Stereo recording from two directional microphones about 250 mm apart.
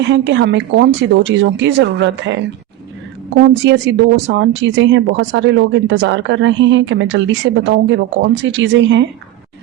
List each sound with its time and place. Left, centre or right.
0.0 s speech: right
3.5 s speech: right